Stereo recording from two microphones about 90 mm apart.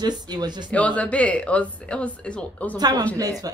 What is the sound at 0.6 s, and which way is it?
Speech, 15° left (ahead or behind).